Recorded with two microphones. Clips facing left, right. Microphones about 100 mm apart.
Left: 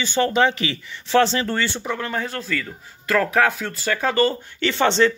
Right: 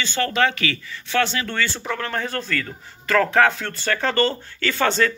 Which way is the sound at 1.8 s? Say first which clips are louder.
Even; 10° left (ahead or behind).